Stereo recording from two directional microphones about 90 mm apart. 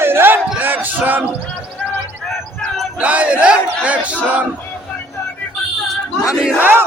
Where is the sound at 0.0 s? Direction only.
25° right (ahead or behind).